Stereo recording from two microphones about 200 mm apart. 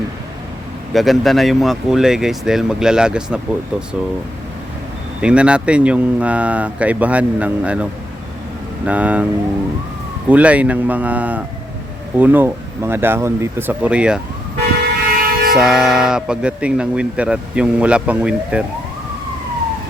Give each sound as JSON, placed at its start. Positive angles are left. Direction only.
{"t": 0.9, "sound": "speech", "side_deg": 0}
{"t": 5.2, "sound": "speech", "side_deg": -5}
{"t": 8.9, "sound": "speech", "side_deg": -5}
{"t": 10.2, "sound": "speech", "side_deg": -5}
{"t": 15.1, "sound": "music", "side_deg": -45}
{"t": 15.5, "sound": "speech", "side_deg": 0}